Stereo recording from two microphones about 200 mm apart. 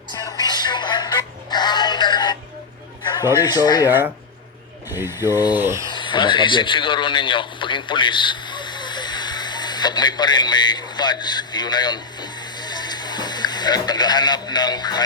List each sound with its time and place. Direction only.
0.1 s music: 20° left (ahead or behind)
3.0 s a sound: 20° left (ahead or behind)
3.4 s speech: 20° left (ahead or behind)
3.8 s speech: 10° right (ahead or behind)
5.9 s a man's voice: 25° left (ahead or behind)